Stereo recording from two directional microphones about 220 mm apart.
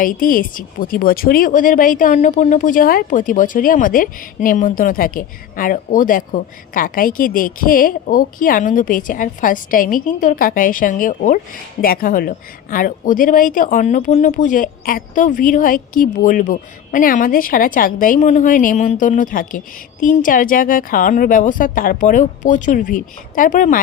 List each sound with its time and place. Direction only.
0.0 s speech: 40° left (ahead or behind)